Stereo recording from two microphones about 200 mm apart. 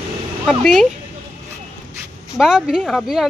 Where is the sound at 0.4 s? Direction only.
Centre (ahead or behind).